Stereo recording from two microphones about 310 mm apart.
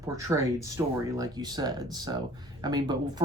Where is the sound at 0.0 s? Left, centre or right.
Centre.